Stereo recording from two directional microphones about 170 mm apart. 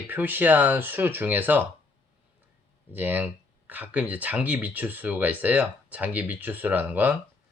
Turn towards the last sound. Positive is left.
turn(degrees=-10)  # may be behind; listen again after turning